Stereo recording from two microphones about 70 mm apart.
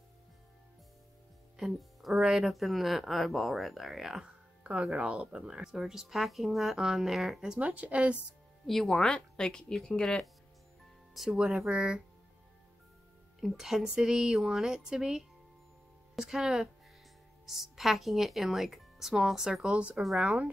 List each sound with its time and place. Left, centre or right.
1.6 s speech: centre
5.1 s speech: centre
7.6 s a woman's voice: right
8.6 s speech: centre
11.1 s speech: centre
13.4 s speech: centre